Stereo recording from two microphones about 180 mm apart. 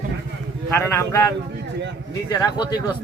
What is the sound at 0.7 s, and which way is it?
A man's voice, 15° left (ahead or behind).